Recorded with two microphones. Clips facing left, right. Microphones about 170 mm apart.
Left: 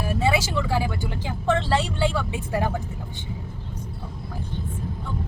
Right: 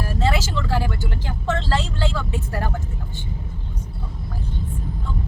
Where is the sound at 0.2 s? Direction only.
15° left (ahead or behind).